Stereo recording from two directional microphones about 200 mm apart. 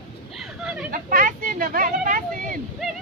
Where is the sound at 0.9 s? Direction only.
45° right (ahead or behind).